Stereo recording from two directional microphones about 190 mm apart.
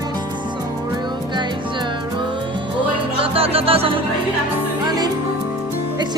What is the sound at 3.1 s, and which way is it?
Music, 30° right (ahead or behind).